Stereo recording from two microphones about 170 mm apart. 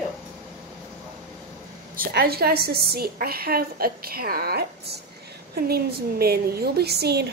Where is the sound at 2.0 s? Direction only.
65° right (ahead or behind).